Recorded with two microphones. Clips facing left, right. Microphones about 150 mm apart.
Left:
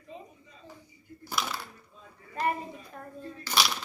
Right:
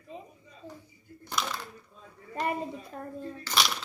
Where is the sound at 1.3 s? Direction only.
5° left (ahead or behind).